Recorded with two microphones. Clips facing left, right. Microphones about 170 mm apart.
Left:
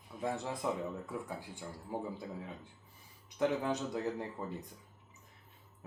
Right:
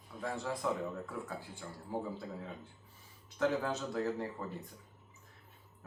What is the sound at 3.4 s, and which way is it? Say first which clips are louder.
Speech: left 1 dB; 15° left (ahead or behind).